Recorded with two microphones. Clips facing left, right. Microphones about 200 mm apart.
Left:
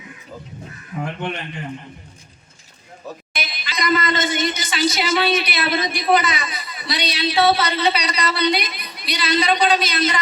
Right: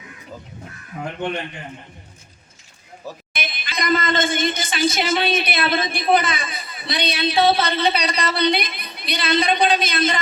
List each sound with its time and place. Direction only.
3.3 s speech: 55° right (ahead or behind)